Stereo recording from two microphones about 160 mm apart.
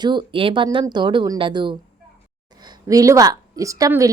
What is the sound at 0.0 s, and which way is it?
A woman's voice, 30° right (ahead or behind).